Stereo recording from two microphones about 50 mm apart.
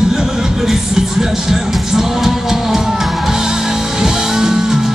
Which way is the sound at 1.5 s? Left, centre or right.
Centre.